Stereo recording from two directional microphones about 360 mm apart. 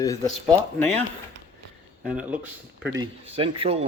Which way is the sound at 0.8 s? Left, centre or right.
Centre.